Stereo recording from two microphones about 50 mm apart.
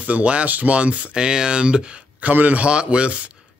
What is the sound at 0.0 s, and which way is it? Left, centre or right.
Speech, right.